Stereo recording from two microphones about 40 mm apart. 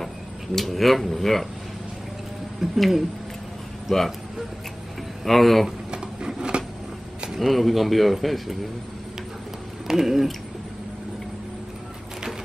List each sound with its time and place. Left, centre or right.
0.6 s speech: centre
2.6 s speech: centre
3.9 s speech: centre
5.2 s speech: centre
5.9 s a sound: right
7.3 s speech: centre
9.8 s speech: centre